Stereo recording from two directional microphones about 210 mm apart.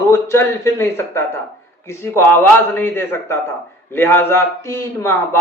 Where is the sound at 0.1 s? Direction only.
10° left (ahead or behind).